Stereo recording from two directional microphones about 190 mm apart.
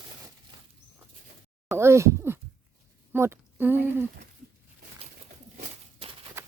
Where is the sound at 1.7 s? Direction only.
15° right (ahead or behind).